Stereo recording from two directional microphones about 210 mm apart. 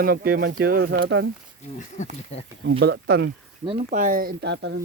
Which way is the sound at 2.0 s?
35° left (ahead or behind).